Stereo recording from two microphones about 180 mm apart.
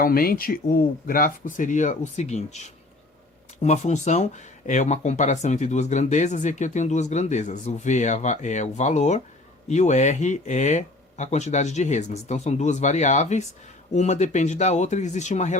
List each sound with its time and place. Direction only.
0.0 s speech: 55° left (ahead or behind)